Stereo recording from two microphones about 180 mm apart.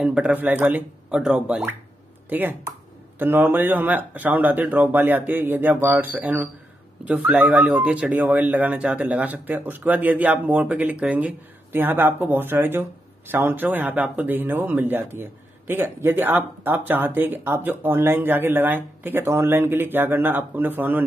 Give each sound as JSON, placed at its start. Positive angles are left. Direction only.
{"t": 0.0, "sound": "speech", "side_deg": -5}